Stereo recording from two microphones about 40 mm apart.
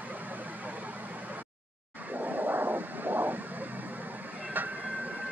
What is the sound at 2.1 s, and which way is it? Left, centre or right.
Vehicle, right.